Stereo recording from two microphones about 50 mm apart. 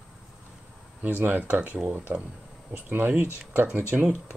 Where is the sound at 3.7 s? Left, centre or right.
Right.